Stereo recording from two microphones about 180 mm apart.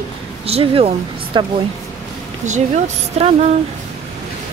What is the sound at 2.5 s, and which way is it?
Speech, 40° right (ahead or behind).